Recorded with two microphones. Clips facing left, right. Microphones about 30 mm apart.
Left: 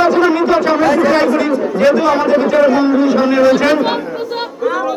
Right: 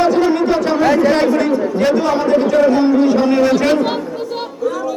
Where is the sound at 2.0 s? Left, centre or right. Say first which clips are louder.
Left 3 dB; centre.